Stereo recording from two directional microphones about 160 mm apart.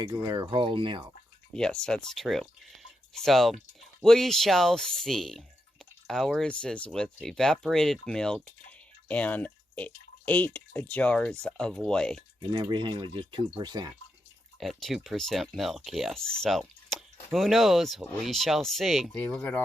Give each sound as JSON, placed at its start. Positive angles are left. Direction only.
{"t": 0.0, "sound": "speech", "side_deg": -25}
{"t": 1.5, "sound": "speech", "side_deg": 5}
{"t": 12.4, "sound": "speech", "side_deg": -30}
{"t": 14.6, "sound": "speech", "side_deg": 0}